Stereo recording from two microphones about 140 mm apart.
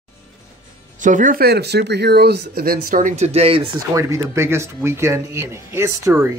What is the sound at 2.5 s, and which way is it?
Speech, 90° right.